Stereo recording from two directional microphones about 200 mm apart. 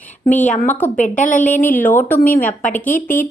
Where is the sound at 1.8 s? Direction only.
10° left (ahead or behind).